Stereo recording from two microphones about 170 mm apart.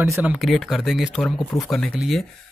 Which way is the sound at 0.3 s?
Centre (ahead or behind).